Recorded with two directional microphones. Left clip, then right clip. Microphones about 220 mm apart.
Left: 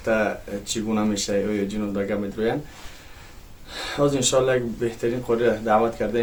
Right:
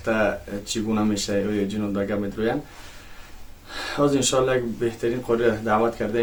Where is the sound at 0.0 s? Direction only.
Centre (ahead or behind).